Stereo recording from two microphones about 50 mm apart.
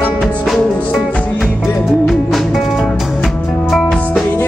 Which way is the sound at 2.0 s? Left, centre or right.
Centre.